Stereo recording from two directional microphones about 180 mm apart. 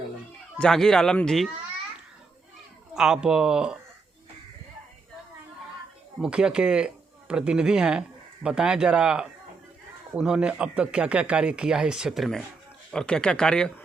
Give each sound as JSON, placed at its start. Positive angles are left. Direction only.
{"t": 0.6, "sound": "speech", "side_deg": 5}
{"t": 2.9, "sound": "speech", "side_deg": -5}
{"t": 6.1, "sound": "speech", "side_deg": -5}